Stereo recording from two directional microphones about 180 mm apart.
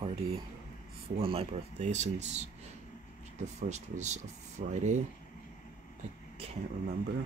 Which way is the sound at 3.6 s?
40° right (ahead or behind).